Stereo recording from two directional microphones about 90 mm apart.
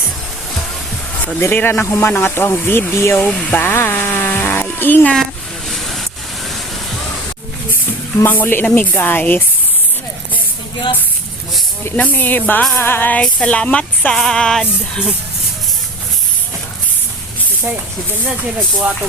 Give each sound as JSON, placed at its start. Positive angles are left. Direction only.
{"t": 1.4, "sound": "speech", "side_deg": 25}
{"t": 5.1, "sound": "a sound", "side_deg": 5}
{"t": 8.2, "sound": "speech", "side_deg": 20}
{"t": 11.9, "sound": "speech", "side_deg": 15}